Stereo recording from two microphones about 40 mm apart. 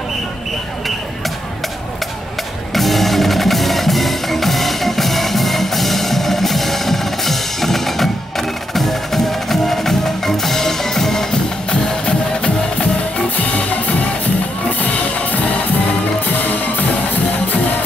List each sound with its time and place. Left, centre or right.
2.7 s music: centre
11.7 s music: left
13.4 s music: left